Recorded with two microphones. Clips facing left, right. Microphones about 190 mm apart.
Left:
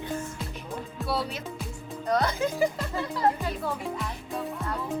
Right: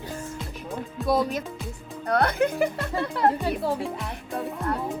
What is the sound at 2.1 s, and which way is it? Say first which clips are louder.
A child's voice: right 3 dB; 60° right (ahead or behind).